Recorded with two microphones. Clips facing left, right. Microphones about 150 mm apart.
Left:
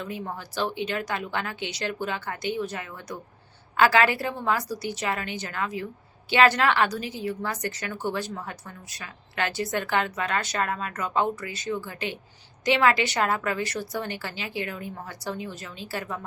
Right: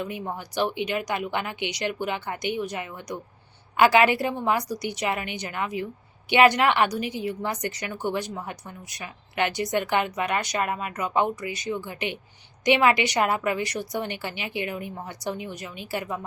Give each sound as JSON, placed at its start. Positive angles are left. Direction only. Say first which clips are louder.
{"t": 0.0, "sound": "a woman's voice", "louder": "right 2 dB", "side_deg": -15}